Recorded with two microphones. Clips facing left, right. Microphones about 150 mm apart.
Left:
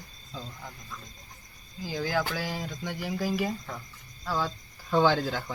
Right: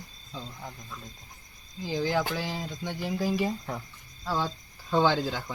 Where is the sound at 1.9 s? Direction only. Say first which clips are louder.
Right 2 dB; 25° right (ahead or behind).